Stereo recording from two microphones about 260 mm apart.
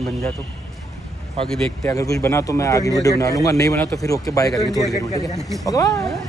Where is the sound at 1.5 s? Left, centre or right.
Centre.